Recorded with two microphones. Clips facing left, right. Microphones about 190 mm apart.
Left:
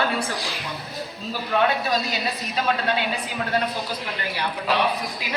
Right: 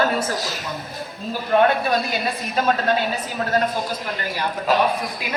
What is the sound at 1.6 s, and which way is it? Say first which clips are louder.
A woman's voice: right 3 dB; 50° right (ahead or behind).